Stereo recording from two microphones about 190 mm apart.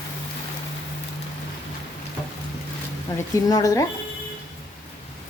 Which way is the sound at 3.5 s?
20° left (ahead or behind).